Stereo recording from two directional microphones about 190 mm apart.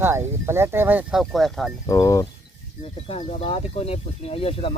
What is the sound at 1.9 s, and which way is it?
Speech, 20° left (ahead or behind).